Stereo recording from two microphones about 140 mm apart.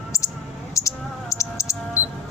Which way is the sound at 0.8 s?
20° left (ahead or behind).